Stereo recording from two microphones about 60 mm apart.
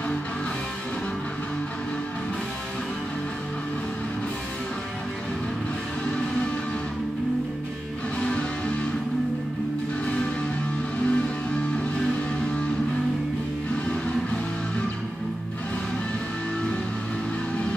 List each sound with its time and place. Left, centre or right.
8.2 s music: centre
11.1 s music: centre
13.8 s music: centre